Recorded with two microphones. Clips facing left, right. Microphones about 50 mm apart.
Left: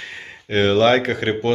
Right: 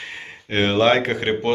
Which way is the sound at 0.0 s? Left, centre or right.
Centre.